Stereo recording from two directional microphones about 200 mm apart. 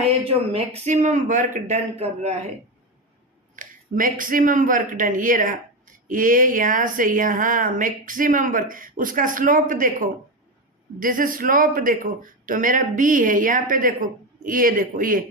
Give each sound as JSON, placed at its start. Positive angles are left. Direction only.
{"t": 0.3, "sound": "a woman's voice", "side_deg": -30}
{"t": 3.5, "sound": "a woman's voice", "side_deg": -40}